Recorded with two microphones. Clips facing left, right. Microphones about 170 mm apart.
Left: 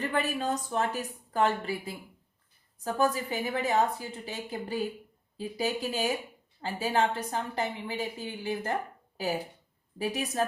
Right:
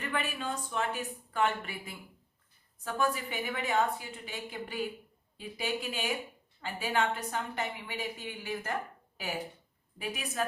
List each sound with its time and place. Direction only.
0.0 s speech: 35° left (ahead or behind)